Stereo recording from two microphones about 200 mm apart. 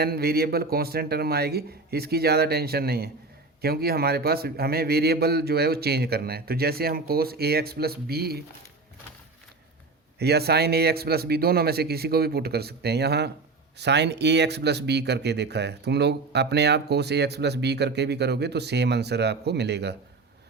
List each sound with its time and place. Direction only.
0.0 s a man's voice: 50° right (ahead or behind)
10.2 s a man's voice: 55° right (ahead or behind)